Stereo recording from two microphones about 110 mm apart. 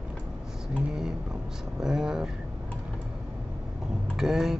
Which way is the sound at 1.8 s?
5° right (ahead or behind).